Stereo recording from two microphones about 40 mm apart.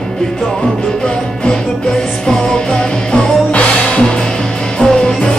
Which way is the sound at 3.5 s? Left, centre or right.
Left.